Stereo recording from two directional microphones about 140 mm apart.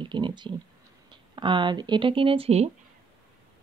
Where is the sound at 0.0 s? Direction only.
35° right (ahead or behind).